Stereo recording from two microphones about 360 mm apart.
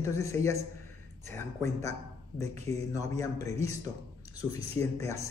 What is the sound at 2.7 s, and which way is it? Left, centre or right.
Speech, centre.